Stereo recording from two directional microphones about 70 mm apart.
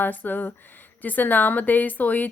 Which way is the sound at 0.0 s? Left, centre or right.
Left.